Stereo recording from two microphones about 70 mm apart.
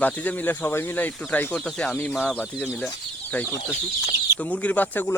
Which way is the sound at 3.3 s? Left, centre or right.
Left.